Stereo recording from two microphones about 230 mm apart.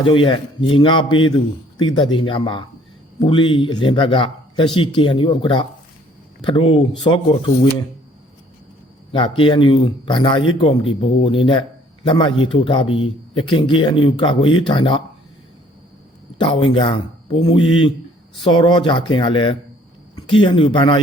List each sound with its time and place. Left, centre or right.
0.0 s speech: left
9.1 s speech: left
16.6 s speech: left